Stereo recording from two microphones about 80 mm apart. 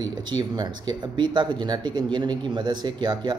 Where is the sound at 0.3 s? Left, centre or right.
Right.